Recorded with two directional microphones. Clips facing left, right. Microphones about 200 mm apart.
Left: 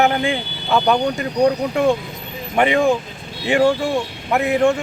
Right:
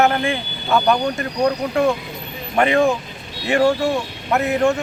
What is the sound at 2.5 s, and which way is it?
Speech, 15° left (ahead or behind).